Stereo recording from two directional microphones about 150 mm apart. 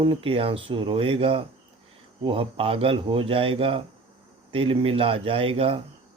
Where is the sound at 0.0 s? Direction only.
35° right (ahead or behind).